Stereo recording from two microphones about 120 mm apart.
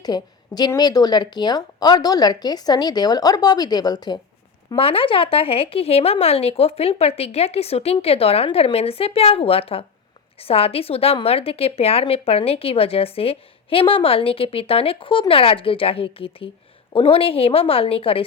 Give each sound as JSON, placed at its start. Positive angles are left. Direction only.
{"t": 0.0, "sound": "a woman's voice", "side_deg": 35}
{"t": 4.7, "sound": "a woman's voice", "side_deg": 50}